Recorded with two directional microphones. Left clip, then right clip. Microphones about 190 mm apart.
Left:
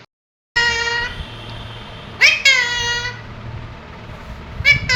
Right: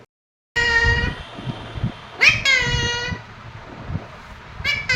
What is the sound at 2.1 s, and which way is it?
Cat, 15° right (ahead or behind).